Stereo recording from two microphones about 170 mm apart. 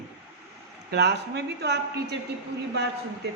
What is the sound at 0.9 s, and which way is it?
Speech, 80° right.